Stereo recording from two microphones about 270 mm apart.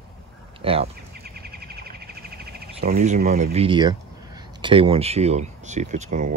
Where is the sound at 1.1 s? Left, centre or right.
Right.